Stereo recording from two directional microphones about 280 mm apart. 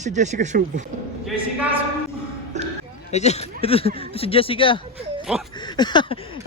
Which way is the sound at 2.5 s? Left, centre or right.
Right.